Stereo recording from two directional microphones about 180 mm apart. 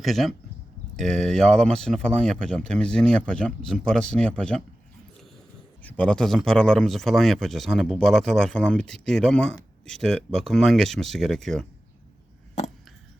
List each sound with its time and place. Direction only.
0.0 s speech: centre (ahead or behind)
5.8 s speech: 5° left (ahead or behind)